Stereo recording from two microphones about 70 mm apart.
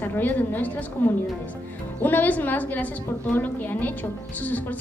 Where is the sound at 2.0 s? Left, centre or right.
Left.